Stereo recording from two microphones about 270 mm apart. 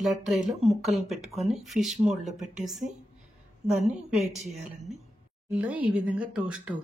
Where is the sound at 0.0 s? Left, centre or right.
Centre.